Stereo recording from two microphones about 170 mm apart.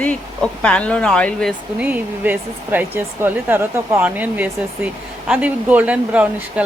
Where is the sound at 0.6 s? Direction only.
5° left (ahead or behind).